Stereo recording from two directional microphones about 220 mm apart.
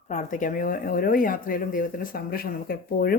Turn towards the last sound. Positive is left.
turn(degrees=45)  # may be behind; listen again after turning